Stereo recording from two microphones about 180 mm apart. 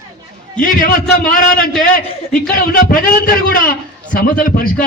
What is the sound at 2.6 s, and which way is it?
A man's voice, 55° left (ahead or behind).